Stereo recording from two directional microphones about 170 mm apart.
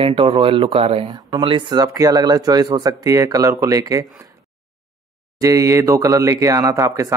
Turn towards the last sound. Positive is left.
turn(degrees=-20)  # may be behind; listen again after turning